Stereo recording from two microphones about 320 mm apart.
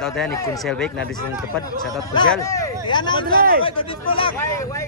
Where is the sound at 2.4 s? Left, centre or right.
Centre.